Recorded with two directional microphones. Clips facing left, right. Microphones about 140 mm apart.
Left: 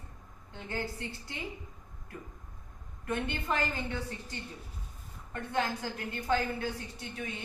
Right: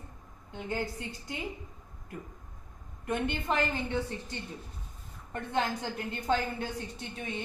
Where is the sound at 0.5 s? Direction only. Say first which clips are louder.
Right 3 dB; 15° right (ahead or behind).